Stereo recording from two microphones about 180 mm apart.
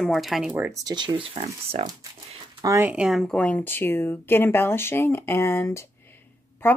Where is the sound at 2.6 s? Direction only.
15° right (ahead or behind).